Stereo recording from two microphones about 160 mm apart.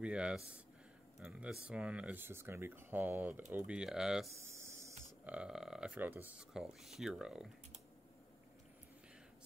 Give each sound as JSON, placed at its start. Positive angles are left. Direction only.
{"t": 0.0, "sound": "speech", "side_deg": -5}
{"t": 4.4, "sound": "a sound", "side_deg": -15}
{"t": 5.2, "sound": "speech", "side_deg": -5}